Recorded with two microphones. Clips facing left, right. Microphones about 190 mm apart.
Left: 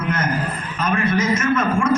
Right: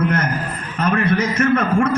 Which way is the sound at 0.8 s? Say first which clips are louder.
Right 1 dB; 60° right (ahead or behind).